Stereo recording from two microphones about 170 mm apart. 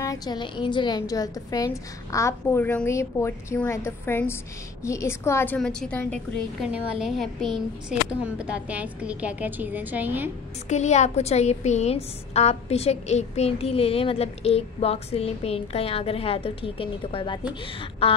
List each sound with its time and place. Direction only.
0.0 s a woman's voice: 20° left (ahead or behind); by 10.3 s 10° right (ahead or behind)
10.7 s a woman's voice: 40° left (ahead or behind)